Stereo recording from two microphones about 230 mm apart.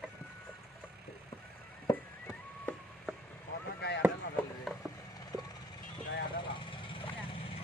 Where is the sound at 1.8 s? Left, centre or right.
Centre.